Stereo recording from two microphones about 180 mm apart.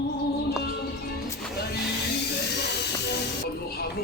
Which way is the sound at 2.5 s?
70° left (ahead or behind).